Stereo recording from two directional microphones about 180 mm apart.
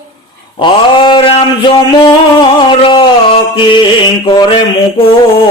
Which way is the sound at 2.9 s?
25° left (ahead or behind).